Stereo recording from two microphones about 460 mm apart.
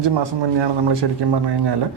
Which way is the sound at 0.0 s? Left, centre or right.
Right.